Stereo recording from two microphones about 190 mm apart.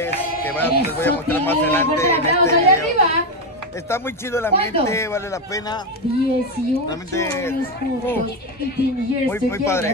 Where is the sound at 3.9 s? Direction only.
15° left (ahead or behind).